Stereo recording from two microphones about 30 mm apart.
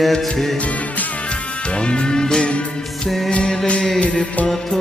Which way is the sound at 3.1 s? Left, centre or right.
Centre.